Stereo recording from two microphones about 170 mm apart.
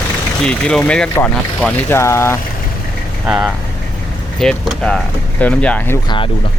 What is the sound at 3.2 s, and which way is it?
Speech, 5° right (ahead or behind).